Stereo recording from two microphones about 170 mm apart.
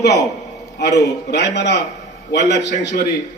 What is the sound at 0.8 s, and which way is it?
Speech, 85° left.